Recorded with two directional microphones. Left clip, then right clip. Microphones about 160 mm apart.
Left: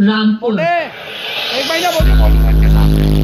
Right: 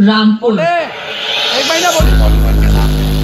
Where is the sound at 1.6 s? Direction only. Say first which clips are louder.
Right 1 dB; 15° left (ahead or behind).